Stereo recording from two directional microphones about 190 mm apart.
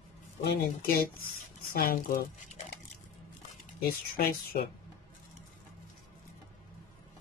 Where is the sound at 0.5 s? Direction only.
55° left (ahead or behind).